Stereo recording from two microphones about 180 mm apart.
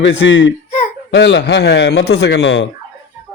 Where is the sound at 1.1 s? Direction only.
70° left (ahead or behind); by 2.6 s 90° left.